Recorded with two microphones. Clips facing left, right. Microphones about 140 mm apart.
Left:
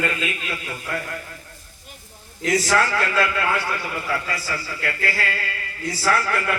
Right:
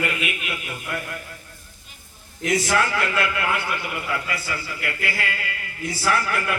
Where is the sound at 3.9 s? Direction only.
20° right (ahead or behind).